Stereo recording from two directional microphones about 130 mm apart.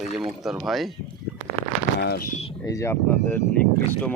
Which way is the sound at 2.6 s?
25° left (ahead or behind).